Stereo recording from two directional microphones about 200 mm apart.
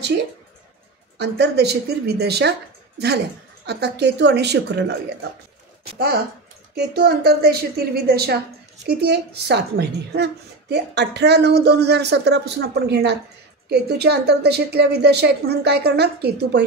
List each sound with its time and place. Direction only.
1.1 s a woman's voice: 60° right (ahead or behind)
3.6 s a woman's voice: 55° right (ahead or behind)
5.9 s a woman's voice: 50° right (ahead or behind)